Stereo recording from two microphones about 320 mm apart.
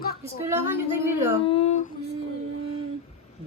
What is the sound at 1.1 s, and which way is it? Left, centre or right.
Speech, centre.